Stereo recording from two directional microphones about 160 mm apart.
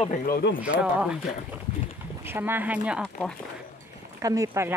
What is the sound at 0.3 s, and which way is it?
Speech, 90° left.